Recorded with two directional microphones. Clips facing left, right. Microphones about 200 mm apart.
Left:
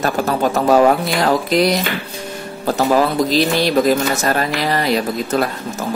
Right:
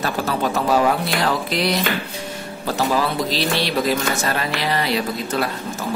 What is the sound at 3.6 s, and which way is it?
Speech, 45° left (ahead or behind).